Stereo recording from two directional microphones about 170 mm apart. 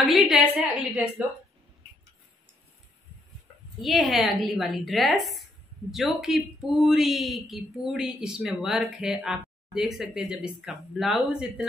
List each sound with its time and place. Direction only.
0.0 s a woman's voice: centre (ahead or behind)
3.8 s a woman's voice: centre (ahead or behind)